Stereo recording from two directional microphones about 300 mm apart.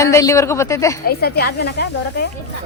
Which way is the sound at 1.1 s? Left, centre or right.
Left.